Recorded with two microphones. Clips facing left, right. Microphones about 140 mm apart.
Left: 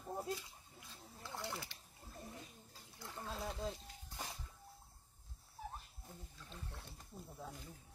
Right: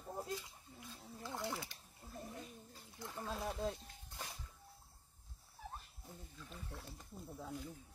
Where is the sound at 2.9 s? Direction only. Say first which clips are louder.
Right 2 dB; 15° right (ahead or behind).